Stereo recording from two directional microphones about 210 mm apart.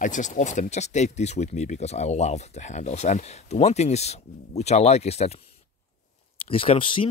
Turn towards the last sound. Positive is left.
turn(degrees=25)  # may be behind; listen again after turning